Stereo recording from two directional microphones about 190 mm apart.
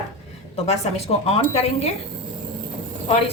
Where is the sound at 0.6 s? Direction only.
35° left (ahead or behind).